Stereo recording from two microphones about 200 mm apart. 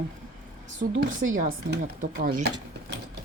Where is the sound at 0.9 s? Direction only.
80° right.